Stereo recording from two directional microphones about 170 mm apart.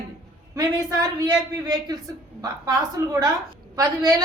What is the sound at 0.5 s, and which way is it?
A man's voice, 20° right (ahead or behind).